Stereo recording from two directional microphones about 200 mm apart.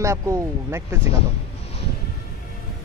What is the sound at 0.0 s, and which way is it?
Speech, 15° right (ahead or behind).